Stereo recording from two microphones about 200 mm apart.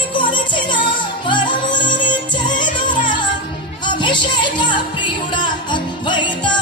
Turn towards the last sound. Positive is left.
turn(degrees=20)  # may be behind; listen again after turning